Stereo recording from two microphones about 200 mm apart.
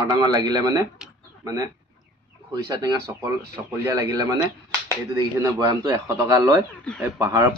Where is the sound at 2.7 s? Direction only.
20° right (ahead or behind).